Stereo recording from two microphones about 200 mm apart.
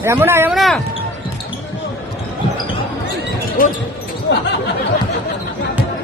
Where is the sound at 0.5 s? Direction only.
Centre (ahead or behind).